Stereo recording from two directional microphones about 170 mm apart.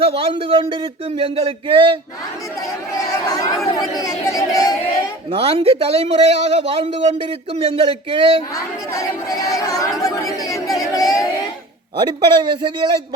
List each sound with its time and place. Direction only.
0.0 s a man's voice: 35° right (ahead or behind)
3.0 s chatter: 20° left (ahead or behind)
5.3 s a man's voice: 35° right (ahead or behind)
8.5 s speech: 20° left (ahead or behind)
11.9 s a man's voice: 30° right (ahead or behind)